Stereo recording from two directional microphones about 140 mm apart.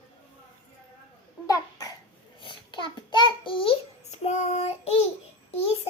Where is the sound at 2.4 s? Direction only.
35° left (ahead or behind).